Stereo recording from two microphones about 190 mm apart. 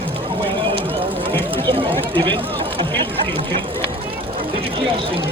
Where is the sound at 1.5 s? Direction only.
30° right (ahead or behind).